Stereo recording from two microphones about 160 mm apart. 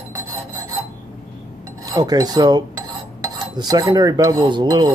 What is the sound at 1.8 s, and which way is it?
Filing, 25° right (ahead or behind).